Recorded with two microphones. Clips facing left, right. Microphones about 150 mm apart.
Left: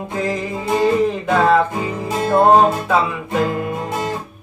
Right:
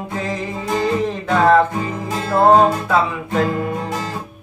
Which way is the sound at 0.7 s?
20° left (ahead or behind).